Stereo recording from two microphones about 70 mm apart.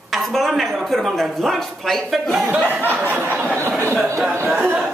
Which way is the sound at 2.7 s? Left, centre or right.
Right.